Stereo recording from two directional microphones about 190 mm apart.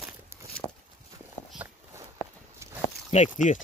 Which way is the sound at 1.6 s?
10° right (ahead or behind).